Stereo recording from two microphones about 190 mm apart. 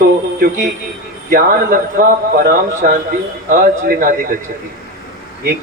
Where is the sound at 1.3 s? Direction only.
50° right (ahead or behind).